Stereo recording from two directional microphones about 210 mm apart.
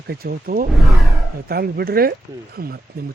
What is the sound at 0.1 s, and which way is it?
A man's voice, 45° right (ahead or behind).